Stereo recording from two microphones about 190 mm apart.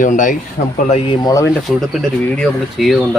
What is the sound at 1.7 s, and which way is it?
Speech, centre (ahead or behind).